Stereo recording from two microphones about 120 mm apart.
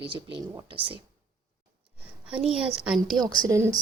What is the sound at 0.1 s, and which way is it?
Speech, 45° right (ahead or behind).